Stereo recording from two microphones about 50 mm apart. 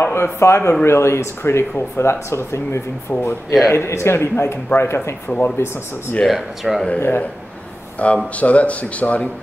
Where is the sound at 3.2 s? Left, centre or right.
Left.